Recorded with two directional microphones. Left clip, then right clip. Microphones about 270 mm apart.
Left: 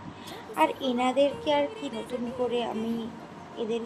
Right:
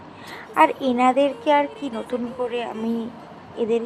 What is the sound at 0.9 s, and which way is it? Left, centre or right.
A woman's voice, centre.